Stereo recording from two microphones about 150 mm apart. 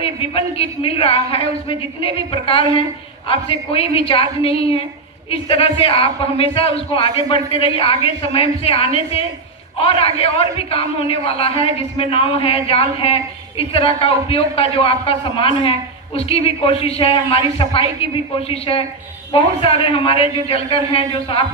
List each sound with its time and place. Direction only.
0.0 s a man's voice: 40° left (ahead or behind)